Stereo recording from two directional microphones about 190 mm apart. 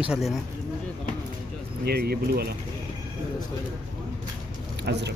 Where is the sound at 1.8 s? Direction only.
55° right (ahead or behind).